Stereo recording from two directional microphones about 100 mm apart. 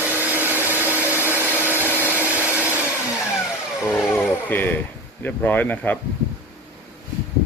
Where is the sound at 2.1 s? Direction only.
15° right (ahead or behind).